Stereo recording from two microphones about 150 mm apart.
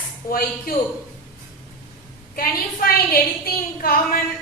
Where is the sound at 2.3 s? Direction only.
75° left (ahead or behind).